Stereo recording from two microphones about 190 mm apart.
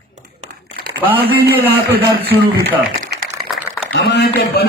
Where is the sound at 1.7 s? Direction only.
55° right (ahead or behind).